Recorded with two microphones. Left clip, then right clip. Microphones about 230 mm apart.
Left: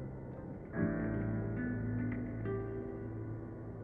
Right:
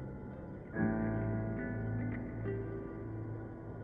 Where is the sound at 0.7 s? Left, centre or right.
Left.